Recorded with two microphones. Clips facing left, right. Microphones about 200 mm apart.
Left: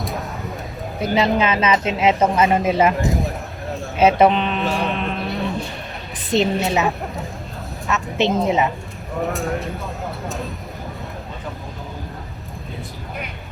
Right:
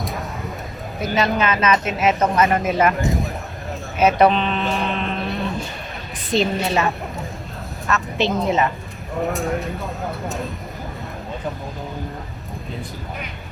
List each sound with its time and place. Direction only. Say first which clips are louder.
0.0 s a sound: left 1 dB; centre (ahead or behind)
1.2 s speech: left 1 dB; 25° left (ahead or behind)
2.2 s speech: left 1 dB; 5° left (ahead or behind)
2.6 s speech: left 2 dB; 25° left (ahead or behind)
3.0 s a sound: left 1 dB; centre (ahead or behind)
3.9 s speech: left 1 dB; 25° left (ahead or behind)
4.3 s speech: even; 10° left (ahead or behind)
6.3 s speech: left 1 dB; 25° left (ahead or behind)
6.7 s speech: left 1 dB; 10° left (ahead or behind)
9.2 s speech: right 1 dB; centre (ahead or behind)